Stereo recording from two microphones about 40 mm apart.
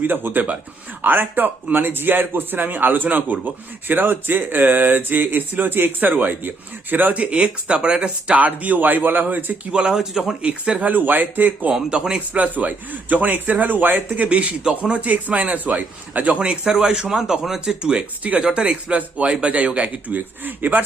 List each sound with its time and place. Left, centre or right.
0.0 s a man's voice: right
8.4 s speech: right
9.7 s speech: right
10.0 s speech: centre
10.4 s speech: right
10.8 s speech: right
11.9 s speech: right
12.4 s speech: right
14.3 s a man's voice: right
16.4 s speech: right
18.3 s a man's voice: right
20.1 s speech: right